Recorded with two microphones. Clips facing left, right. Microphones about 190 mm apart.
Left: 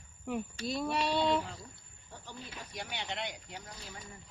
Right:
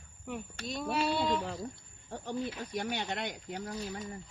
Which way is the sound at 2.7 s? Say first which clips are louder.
Right 4 dB; 50° right (ahead or behind).